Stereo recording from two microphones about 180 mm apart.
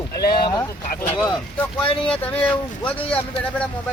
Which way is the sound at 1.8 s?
30° left (ahead or behind).